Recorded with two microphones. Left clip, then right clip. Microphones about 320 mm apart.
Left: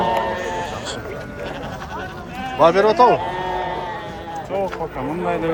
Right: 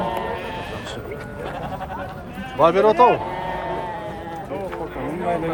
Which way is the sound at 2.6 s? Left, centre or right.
Centre.